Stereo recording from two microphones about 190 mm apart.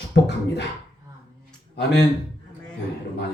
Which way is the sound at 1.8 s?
65° left (ahead or behind).